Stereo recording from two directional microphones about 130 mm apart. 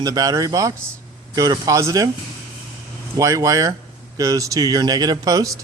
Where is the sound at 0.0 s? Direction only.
30° right (ahead or behind).